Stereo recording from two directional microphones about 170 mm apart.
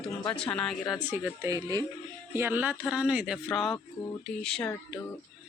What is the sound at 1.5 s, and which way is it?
Speech, 20° right (ahead or behind).